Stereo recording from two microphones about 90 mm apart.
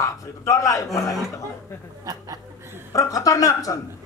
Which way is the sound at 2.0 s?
45° right (ahead or behind).